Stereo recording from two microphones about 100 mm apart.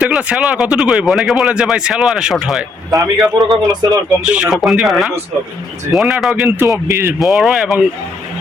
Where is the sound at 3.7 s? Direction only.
40° right (ahead or behind).